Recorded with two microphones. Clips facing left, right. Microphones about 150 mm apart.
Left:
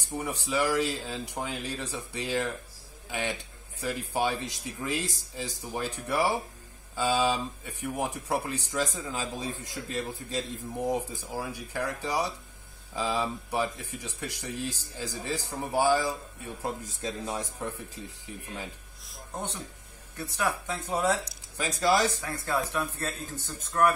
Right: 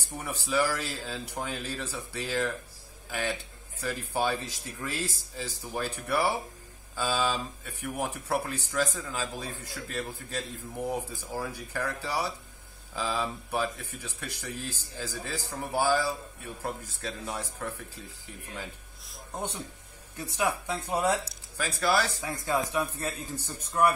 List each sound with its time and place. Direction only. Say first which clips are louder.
0.2 s a man's voice: right 1 dB; 15° left (ahead or behind)
20.3 s speech: right 1 dB; 10° right (ahead or behind)
21.5 s speech: left 2 dB; 20° left (ahead or behind)
22.2 s speech: right 1 dB; 15° right (ahead or behind)